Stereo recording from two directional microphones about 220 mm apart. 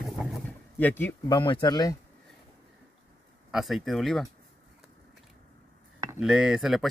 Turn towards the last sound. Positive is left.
turn(degrees=0)  # may be behind; listen again after turning